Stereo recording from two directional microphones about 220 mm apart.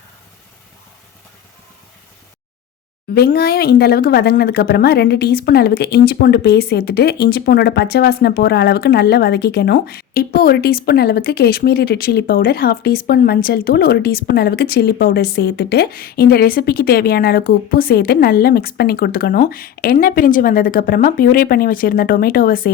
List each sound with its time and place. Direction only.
3.2 s speech: 45° left (ahead or behind)